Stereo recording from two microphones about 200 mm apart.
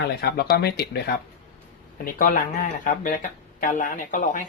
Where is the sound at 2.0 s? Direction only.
45° left (ahead or behind).